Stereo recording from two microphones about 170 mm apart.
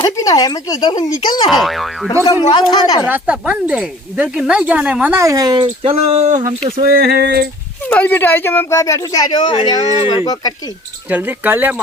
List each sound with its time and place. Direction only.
0.0 s speech: 20° left (ahead or behind)
1.5 s speech: centre (ahead or behind)
2.5 s speech: 25° left (ahead or behind)
3.1 s speech: 10° right (ahead or behind)
5.6 s speech: 35° right (ahead or behind)
6.8 s a sound: 65° right (ahead or behind)
7.9 s speech: 10° left (ahead or behind); by 10.2 s 25° left (ahead or behind)
11.1 s speech: 10° right (ahead or behind)